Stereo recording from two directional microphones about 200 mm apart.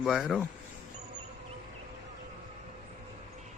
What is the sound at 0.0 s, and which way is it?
Speech, centre (ahead or behind).